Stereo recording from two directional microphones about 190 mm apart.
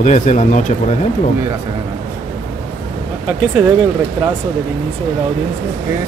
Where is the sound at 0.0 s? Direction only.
40° left (ahead or behind).